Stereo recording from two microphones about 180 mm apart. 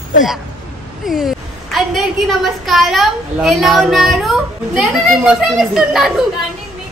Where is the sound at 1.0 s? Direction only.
Centre (ahead or behind).